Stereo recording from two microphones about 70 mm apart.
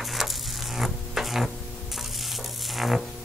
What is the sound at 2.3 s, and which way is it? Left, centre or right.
Music, centre.